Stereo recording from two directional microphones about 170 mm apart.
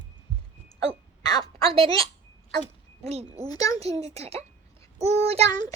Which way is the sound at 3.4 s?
20° left (ahead or behind).